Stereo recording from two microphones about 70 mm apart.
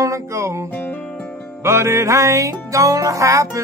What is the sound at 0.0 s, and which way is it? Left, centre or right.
Music, right.